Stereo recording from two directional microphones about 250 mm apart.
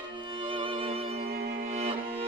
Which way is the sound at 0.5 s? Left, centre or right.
Right.